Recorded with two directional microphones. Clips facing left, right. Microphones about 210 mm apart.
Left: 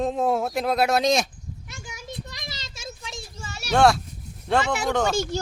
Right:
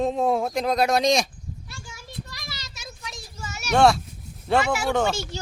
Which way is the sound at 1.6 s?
20° left (ahead or behind).